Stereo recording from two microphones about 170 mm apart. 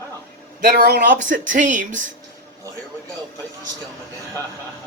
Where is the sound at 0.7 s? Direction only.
65° right (ahead or behind); by 2.0 s 50° right (ahead or behind).